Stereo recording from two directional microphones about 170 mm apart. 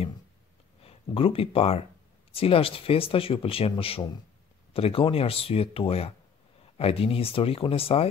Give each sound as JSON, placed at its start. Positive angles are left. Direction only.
{"t": 0.8, "sound": "speech", "side_deg": 35}